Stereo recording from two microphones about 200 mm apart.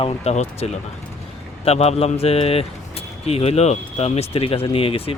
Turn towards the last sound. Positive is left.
turn(degrees=30)  # may be behind; listen again after turning